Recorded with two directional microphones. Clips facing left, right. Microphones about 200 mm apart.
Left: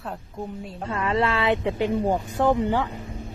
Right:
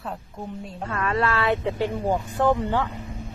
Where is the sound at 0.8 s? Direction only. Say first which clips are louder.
Left 1 dB; 20° left (ahead or behind).